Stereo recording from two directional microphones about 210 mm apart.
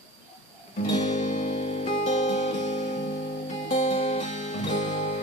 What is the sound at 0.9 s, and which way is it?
Music, 35° left (ahead or behind).